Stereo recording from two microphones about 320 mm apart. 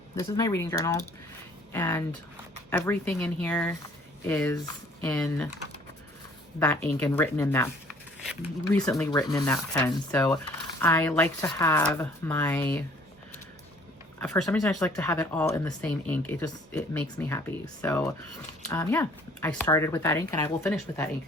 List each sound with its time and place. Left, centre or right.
0.2 s speech: centre
6.8 s speech: centre
14.2 s speech: centre